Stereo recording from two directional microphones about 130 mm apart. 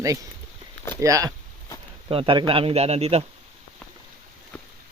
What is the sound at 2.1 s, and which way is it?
A man's voice, 45° right (ahead or behind).